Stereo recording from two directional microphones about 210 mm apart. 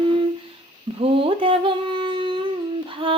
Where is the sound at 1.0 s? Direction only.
25° right (ahead or behind).